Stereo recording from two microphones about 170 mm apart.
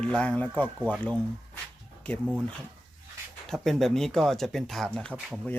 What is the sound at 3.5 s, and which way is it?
Speech, centre (ahead or behind).